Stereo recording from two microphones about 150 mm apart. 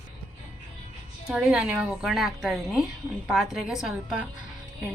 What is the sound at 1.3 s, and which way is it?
A woman's voice, 5° right (ahead or behind).